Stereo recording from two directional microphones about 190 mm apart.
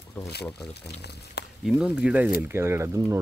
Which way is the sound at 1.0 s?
60° left (ahead or behind).